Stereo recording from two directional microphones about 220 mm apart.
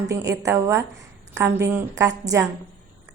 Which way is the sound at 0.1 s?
15° right (ahead or behind).